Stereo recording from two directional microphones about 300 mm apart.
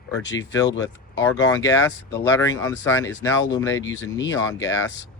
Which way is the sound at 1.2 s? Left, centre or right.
Centre.